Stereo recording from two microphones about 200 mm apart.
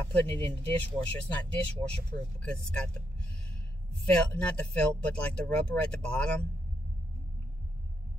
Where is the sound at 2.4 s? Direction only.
5° left (ahead or behind).